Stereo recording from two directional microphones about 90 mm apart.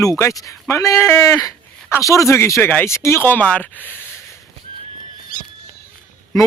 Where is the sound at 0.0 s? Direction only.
35° left (ahead or behind).